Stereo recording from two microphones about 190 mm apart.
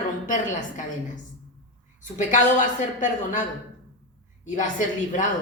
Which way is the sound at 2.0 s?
40° left (ahead or behind).